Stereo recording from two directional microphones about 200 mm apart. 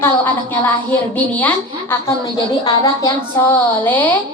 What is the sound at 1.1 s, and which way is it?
A woman's voice, 5° left (ahead or behind).